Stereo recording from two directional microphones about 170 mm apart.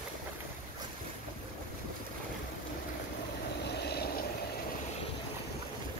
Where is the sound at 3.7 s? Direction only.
75° left (ahead or behind).